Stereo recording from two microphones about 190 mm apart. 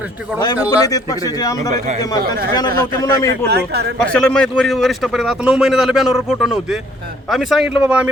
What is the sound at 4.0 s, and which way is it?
A man's voice, 5° left (ahead or behind).